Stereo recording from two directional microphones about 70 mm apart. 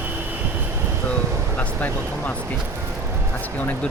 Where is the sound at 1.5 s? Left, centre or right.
Left.